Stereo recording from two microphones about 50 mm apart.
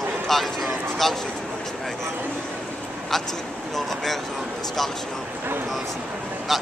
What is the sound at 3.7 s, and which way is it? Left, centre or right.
Speech, centre.